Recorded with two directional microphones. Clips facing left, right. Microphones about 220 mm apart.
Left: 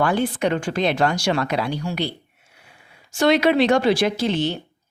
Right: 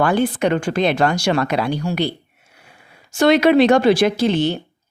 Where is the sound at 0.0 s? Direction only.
60° right (ahead or behind).